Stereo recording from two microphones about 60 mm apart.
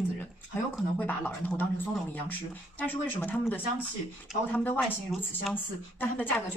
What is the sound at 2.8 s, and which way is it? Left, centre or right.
A woman's voice, left.